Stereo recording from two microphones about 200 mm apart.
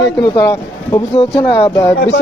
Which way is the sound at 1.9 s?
60° left (ahead or behind).